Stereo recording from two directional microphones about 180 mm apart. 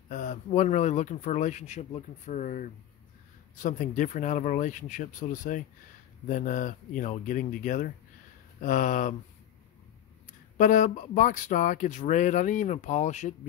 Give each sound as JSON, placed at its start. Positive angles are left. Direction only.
{"t": 0.1, "sound": "speech", "side_deg": 45}
{"t": 10.6, "sound": "speech", "side_deg": 45}